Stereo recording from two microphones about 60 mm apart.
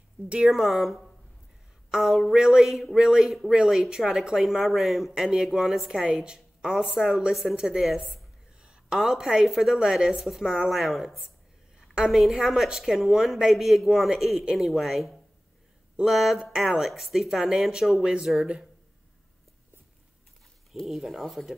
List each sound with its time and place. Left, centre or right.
0.5 s speech: centre
6.0 s speech: centre
8.6 s a sound: centre
9.0 s speech: centre
14.7 s speech: centre
20.7 s speech: centre